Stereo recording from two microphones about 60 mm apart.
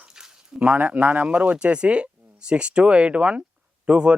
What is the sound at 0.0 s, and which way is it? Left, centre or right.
A man's voice, centre.